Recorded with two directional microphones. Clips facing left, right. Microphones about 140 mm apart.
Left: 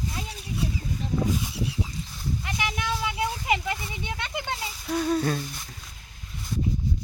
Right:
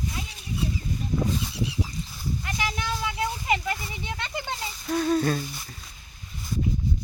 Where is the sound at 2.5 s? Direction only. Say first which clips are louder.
Left 1 dB; 10° left (ahead or behind).